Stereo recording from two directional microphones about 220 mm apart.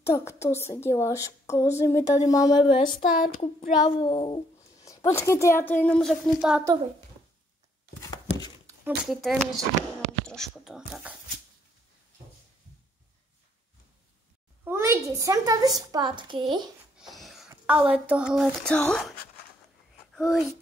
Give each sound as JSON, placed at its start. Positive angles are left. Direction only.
{"t": 0.0, "sound": "a woman's voice", "side_deg": 10}
{"t": 3.2, "sound": "a sound", "side_deg": 35}
{"t": 3.8, "sound": "a sound", "side_deg": 20}
{"t": 4.8, "sound": "a woman's voice", "side_deg": 15}
{"t": 8.6, "sound": "speech", "side_deg": -5}
{"t": 14.6, "sound": "a woman's voice", "side_deg": -10}
{"t": 16.9, "sound": "wheeze", "side_deg": 0}
{"t": 17.5, "sound": "a sound", "side_deg": -5}
{"t": 17.9, "sound": "a child's voice", "side_deg": -5}